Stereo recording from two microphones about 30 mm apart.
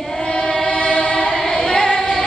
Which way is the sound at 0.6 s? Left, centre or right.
Left.